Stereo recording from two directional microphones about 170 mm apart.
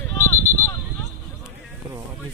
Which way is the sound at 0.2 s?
15° left (ahead or behind).